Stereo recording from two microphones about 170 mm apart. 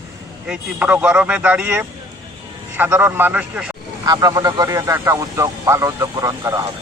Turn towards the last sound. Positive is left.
turn(degrees=-20)  # may be behind; listen again after turning